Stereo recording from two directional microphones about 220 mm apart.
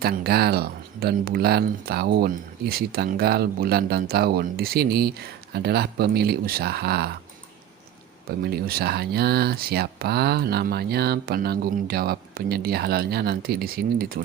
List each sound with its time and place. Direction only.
0.0 s speech: 45° right (ahead or behind)
8.4 s speech: 45° right (ahead or behind)